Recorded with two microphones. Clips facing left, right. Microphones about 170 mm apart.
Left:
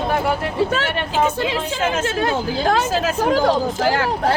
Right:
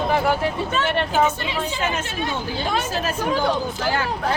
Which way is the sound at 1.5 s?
90° left.